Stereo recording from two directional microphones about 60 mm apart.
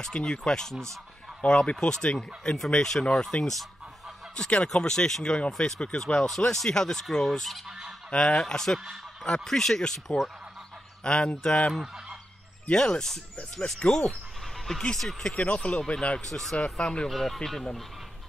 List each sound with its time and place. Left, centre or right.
0.0 s speech: centre
4.5 s speech: centre
11.1 s speech: centre
11.7 s fowl: centre
12.6 s speech: centre
16.3 s speech: centre
16.5 s speech: centre
17.1 s speech: centre